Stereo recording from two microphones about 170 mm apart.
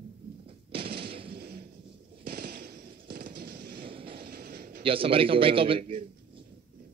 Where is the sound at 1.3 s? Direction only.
65° right (ahead or behind).